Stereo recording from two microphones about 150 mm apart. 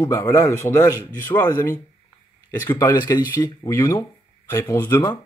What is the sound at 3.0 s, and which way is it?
Speech, 30° left (ahead or behind).